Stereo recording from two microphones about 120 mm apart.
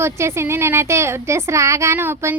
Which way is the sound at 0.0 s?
20° right (ahead or behind).